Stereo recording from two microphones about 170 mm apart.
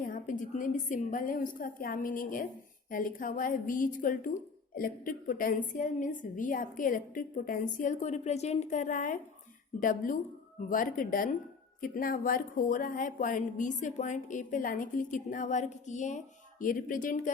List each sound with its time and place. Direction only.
0.0 s speech: 50° left (ahead or behind)